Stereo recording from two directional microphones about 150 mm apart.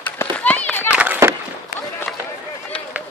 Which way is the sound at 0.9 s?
10° right (ahead or behind).